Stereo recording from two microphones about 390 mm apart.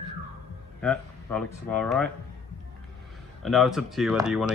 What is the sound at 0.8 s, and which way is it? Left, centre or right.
Speech, centre.